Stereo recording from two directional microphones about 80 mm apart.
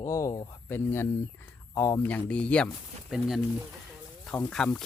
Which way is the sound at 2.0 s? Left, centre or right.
Centre.